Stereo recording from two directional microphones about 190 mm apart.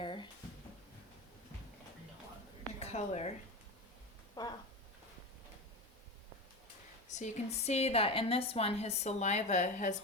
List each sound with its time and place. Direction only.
0.0 s drawer open or close: 25° left (ahead or behind)
2.8 s a woman's voice: 35° left (ahead or behind)
4.4 s a sound: 20° left (ahead or behind)
7.1 s a woman's voice: 35° left (ahead or behind)